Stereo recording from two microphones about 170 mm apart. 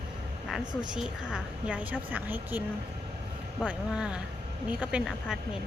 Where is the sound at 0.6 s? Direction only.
25° right (ahead or behind).